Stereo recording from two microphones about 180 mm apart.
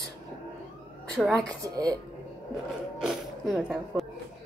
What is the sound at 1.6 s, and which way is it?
Speech, 20° right (ahead or behind).